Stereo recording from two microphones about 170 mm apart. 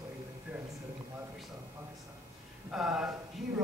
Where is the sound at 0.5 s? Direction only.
10° right (ahead or behind).